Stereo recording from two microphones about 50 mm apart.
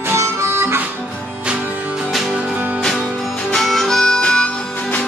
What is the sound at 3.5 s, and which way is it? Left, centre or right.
Harmonica, centre.